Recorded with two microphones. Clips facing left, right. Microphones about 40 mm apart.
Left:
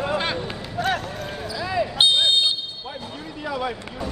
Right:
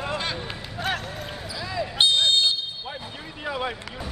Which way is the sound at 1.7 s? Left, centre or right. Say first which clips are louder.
Left 2 dB; left.